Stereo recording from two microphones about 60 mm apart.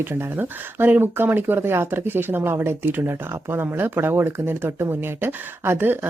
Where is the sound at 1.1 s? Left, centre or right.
Right.